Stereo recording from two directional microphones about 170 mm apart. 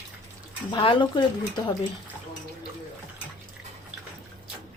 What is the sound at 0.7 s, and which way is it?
Speech, 30° left (ahead or behind).